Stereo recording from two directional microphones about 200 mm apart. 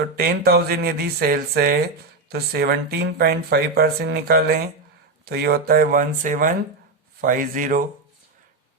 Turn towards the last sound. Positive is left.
turn(degrees=-45)  # may be behind; listen again after turning